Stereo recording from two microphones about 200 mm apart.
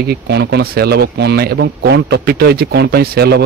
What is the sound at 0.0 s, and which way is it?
Speech, 55° right (ahead or behind).